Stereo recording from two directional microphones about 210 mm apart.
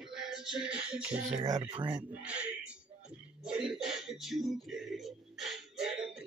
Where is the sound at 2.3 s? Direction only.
5° right (ahead or behind).